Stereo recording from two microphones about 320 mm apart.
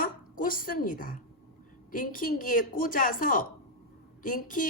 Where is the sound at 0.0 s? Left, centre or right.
Left.